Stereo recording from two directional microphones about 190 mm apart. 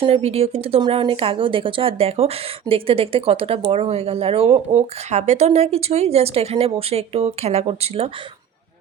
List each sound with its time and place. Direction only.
0.0 s speech: 30° right (ahead or behind)